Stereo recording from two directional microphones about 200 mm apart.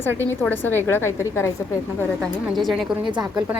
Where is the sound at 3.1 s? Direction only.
25° right (ahead or behind).